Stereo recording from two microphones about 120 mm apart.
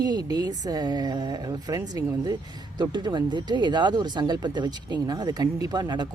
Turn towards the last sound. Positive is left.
turn(degrees=-35)  # may be behind; listen again after turning